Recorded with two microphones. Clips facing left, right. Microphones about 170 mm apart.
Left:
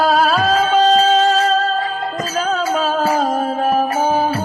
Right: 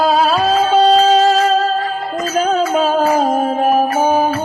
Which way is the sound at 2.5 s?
40° right (ahead or behind).